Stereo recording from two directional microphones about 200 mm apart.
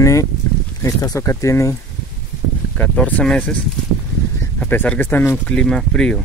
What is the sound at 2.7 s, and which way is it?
Speech, 5° left (ahead or behind).